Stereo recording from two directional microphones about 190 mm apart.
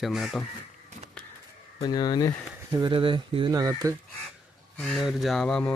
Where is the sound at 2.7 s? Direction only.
25° right (ahead or behind).